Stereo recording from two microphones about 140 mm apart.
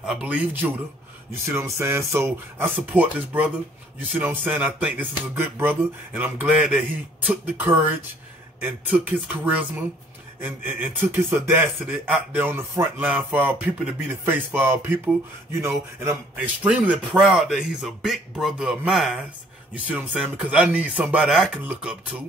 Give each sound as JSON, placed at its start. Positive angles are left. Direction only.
{"t": 0.0, "sound": "a man's voice", "side_deg": -5}